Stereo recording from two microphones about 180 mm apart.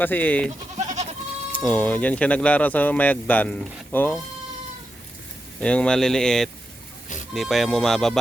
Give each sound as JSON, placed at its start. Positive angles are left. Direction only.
{"t": 0.0, "sound": "speech", "side_deg": 10}
{"t": 0.8, "sound": "goat", "side_deg": -40}
{"t": 1.6, "sound": "speech", "side_deg": 10}
{"t": 5.5, "sound": "speech", "side_deg": 5}